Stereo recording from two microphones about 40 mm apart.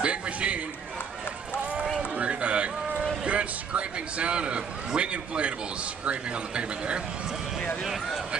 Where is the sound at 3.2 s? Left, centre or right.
Right.